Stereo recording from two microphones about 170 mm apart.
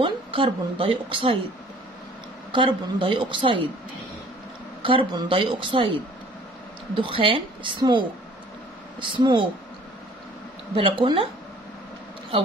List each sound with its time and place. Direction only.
0.0 s a woman's voice: 30° right (ahead or behind)
2.5 s a woman's voice: 30° right (ahead or behind)
4.8 s speech: 30° right (ahead or behind)
7.0 s a woman's voice: 30° right (ahead or behind)
9.0 s a woman's voice: 30° right (ahead or behind)
10.8 s speech: 30° right (ahead or behind)